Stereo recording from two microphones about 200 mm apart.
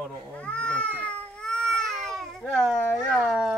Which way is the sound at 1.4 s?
5° left (ahead or behind).